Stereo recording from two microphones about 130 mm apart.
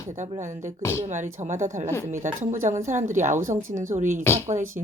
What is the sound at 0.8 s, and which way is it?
Speech, 20° left (ahead or behind).